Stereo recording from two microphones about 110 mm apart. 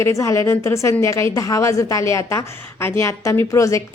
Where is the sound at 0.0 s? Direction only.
25° left (ahead or behind).